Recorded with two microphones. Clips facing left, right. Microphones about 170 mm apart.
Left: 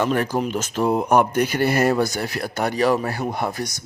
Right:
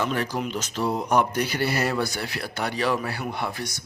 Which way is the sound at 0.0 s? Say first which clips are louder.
Left 5 dB; 50° left (ahead or behind).